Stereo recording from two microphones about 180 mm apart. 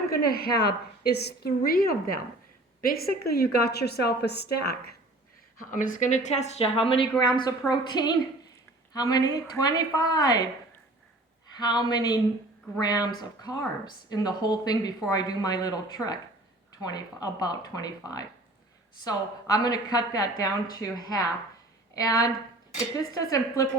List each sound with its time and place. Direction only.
0.1 s a woman's voice: 60° left (ahead or behind)
5.7 s a woman's voice: 45° left (ahead or behind); by 10.4 s 20° left (ahead or behind)
11.4 s a woman's voice: 25° left (ahead or behind)
22.0 s a woman's voice: 20° left (ahead or behind)